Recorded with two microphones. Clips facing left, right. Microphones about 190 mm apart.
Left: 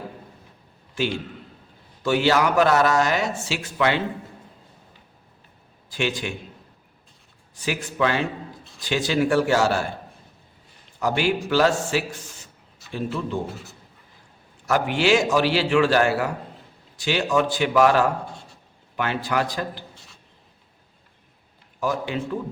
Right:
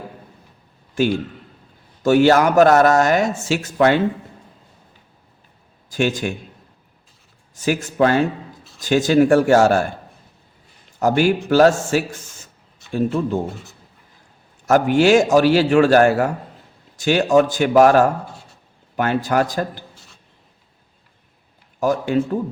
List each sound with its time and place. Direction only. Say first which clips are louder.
1.0 s a man's voice: right 7 dB; 45° right (ahead or behind)
5.9 s speech: right 6 dB; 45° right (ahead or behind)
7.5 s speech: right 7 dB; 45° right (ahead or behind)
11.0 s speech: right 6 dB; 45° right (ahead or behind)
12.8 s a sound: right 7 dB; centre (ahead or behind)
14.7 s speech: right 6 dB; 45° right (ahead or behind)
21.8 s speech: right 7 dB; 45° right (ahead or behind)